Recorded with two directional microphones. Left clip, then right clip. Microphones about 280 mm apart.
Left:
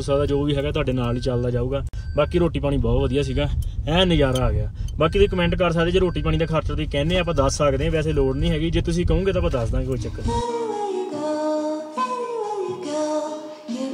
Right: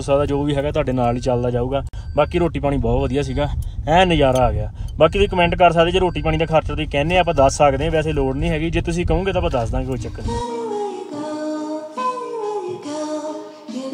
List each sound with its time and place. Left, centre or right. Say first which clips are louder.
0.1 s speech: right 3 dB; centre
0.7 s speech: right 4 dB; centre
0.9 s speech: right 6 dB; centre